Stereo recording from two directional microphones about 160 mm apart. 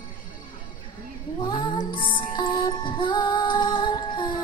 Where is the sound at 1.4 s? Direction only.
30° left (ahead or behind).